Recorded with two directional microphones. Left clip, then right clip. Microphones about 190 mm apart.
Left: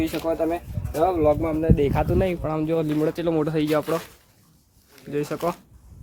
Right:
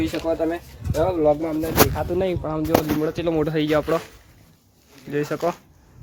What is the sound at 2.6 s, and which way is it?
Speech, 30° left (ahead or behind).